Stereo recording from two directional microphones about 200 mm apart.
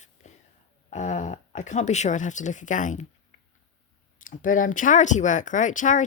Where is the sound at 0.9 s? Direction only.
35° left (ahead or behind).